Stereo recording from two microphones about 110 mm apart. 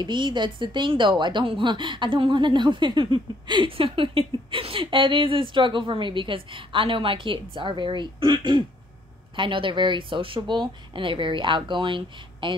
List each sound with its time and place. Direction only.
0.0 s a woman's voice: 45° right (ahead or behind)